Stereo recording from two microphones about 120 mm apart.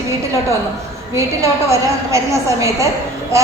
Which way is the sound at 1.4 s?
25° right (ahead or behind).